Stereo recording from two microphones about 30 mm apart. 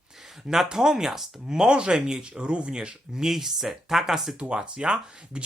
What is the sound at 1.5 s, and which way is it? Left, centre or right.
Speech, right.